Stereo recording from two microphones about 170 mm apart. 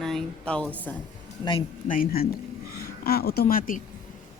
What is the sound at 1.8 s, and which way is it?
A woman's voice, 55° left (ahead or behind).